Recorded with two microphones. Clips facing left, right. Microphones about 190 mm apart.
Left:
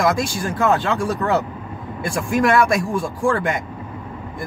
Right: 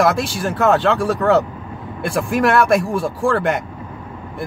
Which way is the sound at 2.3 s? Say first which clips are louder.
Right 1 dB; 60° right (ahead or behind).